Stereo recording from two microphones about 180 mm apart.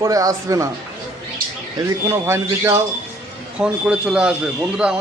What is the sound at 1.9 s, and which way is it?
A man's voice, 15° right (ahead or behind).